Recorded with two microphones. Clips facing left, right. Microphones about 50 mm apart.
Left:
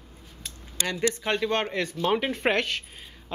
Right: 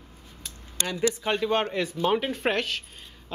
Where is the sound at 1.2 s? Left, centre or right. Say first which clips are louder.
Right 1 dB; centre.